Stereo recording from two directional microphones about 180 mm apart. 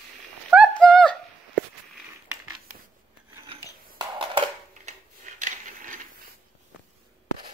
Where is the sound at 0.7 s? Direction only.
5° left (ahead or behind).